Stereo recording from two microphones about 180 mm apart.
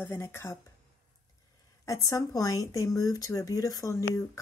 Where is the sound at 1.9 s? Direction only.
20° left (ahead or behind).